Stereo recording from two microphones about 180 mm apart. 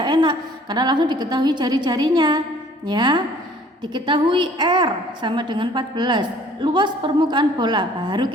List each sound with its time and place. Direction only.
0.0 s a woman's voice: 25° right (ahead or behind)